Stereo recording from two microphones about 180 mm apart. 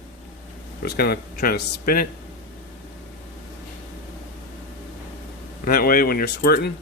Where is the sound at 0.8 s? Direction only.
60° left (ahead or behind).